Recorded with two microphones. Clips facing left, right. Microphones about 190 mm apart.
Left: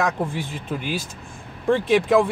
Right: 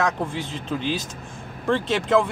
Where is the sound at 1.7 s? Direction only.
10° left (ahead or behind).